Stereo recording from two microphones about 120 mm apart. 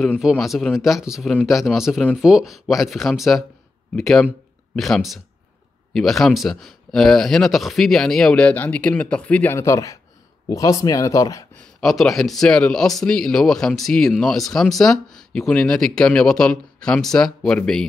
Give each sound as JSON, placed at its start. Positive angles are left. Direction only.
{"t": 0.2, "sound": "speech", "side_deg": 0}
{"t": 11.5, "sound": "speech", "side_deg": 5}